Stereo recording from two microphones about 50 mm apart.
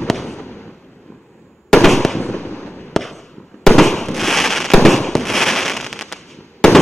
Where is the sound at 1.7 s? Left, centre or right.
Centre; by 2.8 s left.